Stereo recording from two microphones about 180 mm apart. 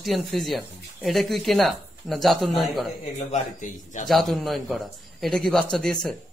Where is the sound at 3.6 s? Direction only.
45° left (ahead or behind).